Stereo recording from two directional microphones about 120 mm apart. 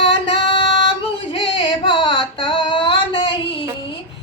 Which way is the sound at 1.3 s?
45° left (ahead or behind).